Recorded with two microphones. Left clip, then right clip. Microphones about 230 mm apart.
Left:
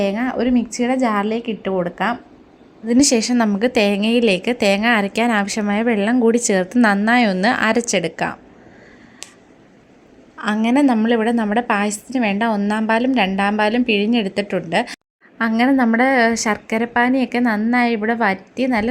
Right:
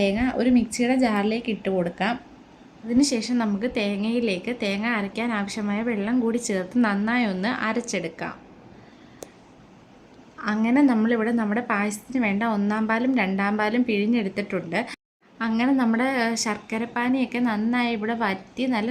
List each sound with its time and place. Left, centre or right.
0.0 s a woman's voice: centre
3.0 s a woman's voice: left
10.3 s a woman's voice: centre